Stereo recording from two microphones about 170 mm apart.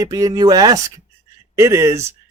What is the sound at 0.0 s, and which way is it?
A man's voice, 20° right (ahead or behind).